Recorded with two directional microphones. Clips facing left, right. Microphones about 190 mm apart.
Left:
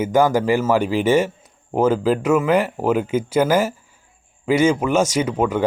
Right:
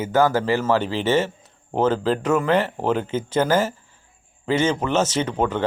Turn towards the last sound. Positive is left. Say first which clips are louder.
# left 3 dB
turn(degrees=10)  # may be behind; listen again after turning